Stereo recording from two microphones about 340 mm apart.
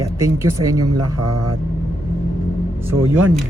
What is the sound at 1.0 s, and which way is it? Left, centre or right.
Speech, right.